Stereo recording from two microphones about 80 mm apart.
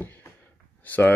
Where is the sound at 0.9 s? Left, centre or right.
Left.